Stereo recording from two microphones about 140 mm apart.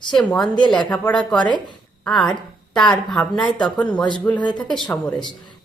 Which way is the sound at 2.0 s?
Centre (ahead or behind).